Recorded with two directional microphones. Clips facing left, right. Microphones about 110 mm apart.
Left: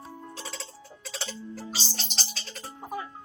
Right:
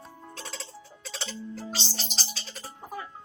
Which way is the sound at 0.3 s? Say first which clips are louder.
Left 1 dB; centre (ahead or behind).